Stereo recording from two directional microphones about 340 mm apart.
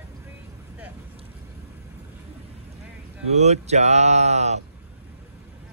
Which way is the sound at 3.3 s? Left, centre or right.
Centre.